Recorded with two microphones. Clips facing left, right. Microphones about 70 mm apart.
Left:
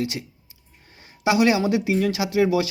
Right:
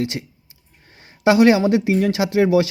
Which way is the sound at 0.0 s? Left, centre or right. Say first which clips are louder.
Right 3 dB; right.